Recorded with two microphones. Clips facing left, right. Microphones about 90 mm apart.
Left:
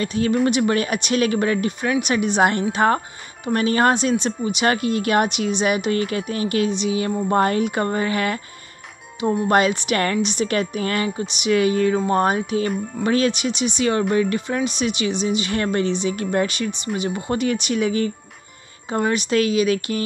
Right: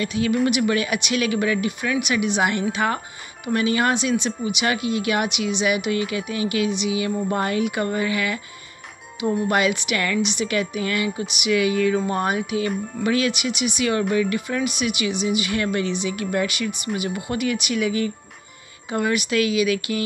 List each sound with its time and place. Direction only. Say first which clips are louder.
0.0 s speech: left 2 dB; 35° left (ahead or behind)
9.5 s speech: left 3 dB; 35° left (ahead or behind)